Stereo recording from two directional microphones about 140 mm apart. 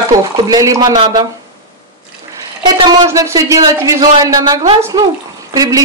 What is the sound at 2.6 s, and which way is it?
Speech, 30° right (ahead or behind).